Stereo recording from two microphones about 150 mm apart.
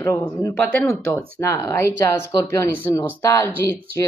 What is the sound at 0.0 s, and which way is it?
Speech, 15° left (ahead or behind).